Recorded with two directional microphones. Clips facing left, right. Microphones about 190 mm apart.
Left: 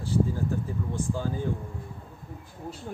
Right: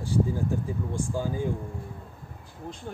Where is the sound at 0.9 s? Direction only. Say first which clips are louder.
Right 1 dB; 10° right (ahead or behind).